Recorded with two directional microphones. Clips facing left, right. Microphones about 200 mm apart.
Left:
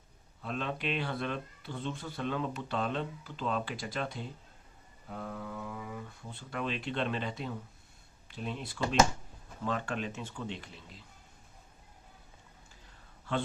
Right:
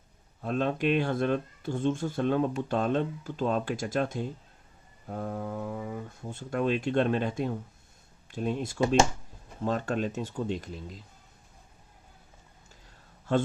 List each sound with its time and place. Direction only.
0.4 s speech: 45° right (ahead or behind)